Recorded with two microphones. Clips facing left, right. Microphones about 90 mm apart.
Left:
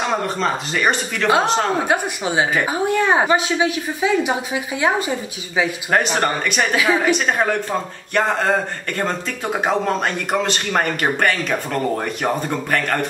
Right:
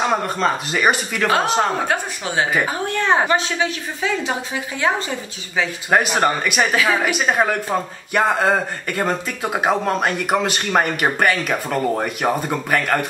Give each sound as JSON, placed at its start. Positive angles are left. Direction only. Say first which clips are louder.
{"t": 0.0, "sound": "a man's voice", "louder": "right 1 dB", "side_deg": -5}
{"t": 1.9, "sound": "a woman's voice", "louder": "left 3 dB", "side_deg": 15}
{"t": 5.9, "sound": "a man's voice", "louder": "right 4 dB", "side_deg": -5}
{"t": 6.7, "sound": "a woman's voice", "louder": "left 3 dB", "side_deg": 10}
{"t": 7.0, "sound": "a man's voice", "louder": "even", "side_deg": -5}